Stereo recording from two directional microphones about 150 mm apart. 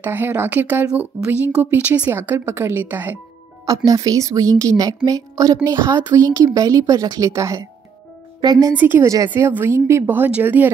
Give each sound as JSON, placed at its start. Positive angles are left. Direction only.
{"t": 0.0, "sound": "a woman's voice", "side_deg": -15}
{"t": 8.7, "sound": "a woman's voice", "side_deg": -15}